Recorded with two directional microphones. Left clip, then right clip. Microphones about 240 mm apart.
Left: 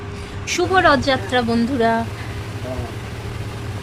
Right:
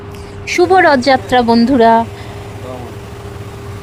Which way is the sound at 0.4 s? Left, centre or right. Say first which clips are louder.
Right 6 dB; right.